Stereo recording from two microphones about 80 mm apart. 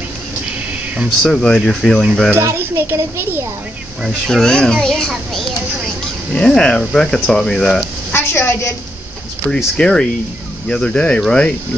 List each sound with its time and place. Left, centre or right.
1.2 s speech: centre
2.3 s a child's voice: right
4.3 s speech: centre
8.1 s a woman's voice: left
9.5 s speech: centre